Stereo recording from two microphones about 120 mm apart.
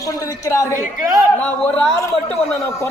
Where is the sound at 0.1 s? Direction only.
25° left (ahead or behind).